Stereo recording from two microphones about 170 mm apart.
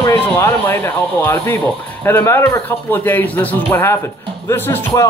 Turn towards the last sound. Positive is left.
turn(degrees=15)  # may be behind; listen again after turning